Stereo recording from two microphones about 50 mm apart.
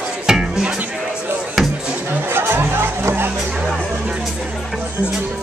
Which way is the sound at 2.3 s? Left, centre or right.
Right.